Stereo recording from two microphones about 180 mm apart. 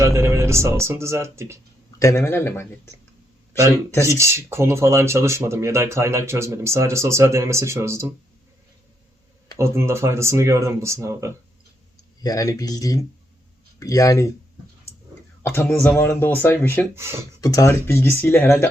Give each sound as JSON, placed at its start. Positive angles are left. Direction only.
{"t": 0.0, "sound": "speech", "side_deg": -15}
{"t": 2.0, "sound": "speech", "side_deg": 15}
{"t": 4.2, "sound": "speech", "side_deg": -15}
{"t": 9.6, "sound": "speech", "side_deg": -15}
{"t": 12.2, "sound": "speech", "side_deg": 20}
{"t": 15.4, "sound": "speech", "side_deg": 10}
{"t": 16.9, "sound": "speech", "side_deg": -15}
{"t": 17.4, "sound": "speech", "side_deg": 20}